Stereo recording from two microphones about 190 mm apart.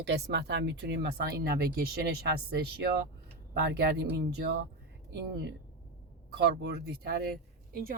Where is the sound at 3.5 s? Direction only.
60° right (ahead or behind).